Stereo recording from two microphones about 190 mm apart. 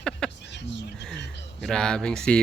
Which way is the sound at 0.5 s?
65° left (ahead or behind).